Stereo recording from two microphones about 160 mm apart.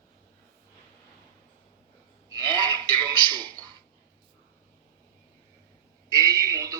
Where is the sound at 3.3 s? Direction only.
25° right (ahead or behind).